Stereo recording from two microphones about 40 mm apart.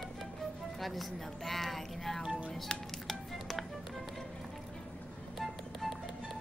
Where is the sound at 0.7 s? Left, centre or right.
Centre.